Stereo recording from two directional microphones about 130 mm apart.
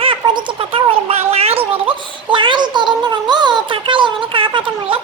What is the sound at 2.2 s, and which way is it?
Child singing, 40° right (ahead or behind).